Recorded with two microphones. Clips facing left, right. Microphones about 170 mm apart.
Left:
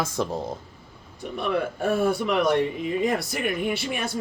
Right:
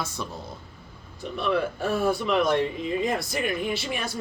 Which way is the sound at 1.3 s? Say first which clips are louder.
Even; 50° left (ahead or behind).